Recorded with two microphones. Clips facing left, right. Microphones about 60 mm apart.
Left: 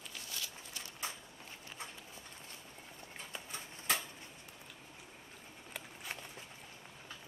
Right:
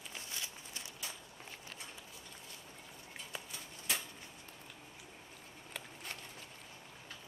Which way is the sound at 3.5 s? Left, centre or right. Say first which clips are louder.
Left 5 dB; left.